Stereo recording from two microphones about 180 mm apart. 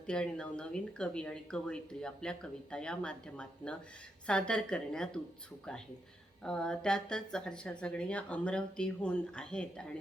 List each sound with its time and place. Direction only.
0.1 s speech: 5° left (ahead or behind)
6.4 s speech: 5° left (ahead or behind)